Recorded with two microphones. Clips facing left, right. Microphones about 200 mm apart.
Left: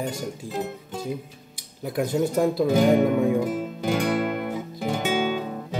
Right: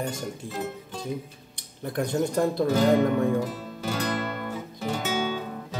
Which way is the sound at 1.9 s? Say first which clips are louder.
Left 2 dB; 5° left (ahead or behind).